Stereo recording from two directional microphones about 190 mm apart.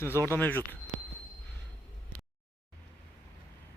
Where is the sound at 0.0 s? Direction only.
10° left (ahead or behind).